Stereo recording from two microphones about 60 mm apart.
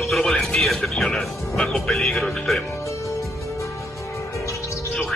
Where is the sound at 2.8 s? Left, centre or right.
Left.